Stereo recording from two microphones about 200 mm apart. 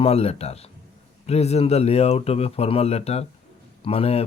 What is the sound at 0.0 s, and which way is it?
Speech, 30° left (ahead or behind).